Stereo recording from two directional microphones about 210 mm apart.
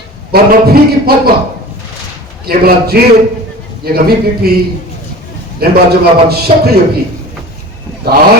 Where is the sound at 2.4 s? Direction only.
50° right (ahead or behind).